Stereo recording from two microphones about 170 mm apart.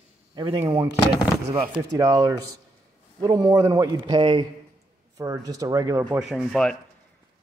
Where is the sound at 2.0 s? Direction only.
20° right (ahead or behind).